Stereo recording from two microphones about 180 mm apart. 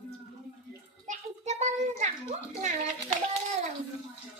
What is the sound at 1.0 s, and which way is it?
Children playing, 40° right (ahead or behind).